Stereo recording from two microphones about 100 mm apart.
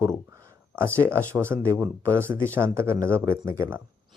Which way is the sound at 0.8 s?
25° right (ahead or behind).